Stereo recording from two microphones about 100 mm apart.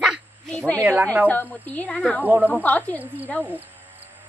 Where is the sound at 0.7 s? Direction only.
20° right (ahead or behind).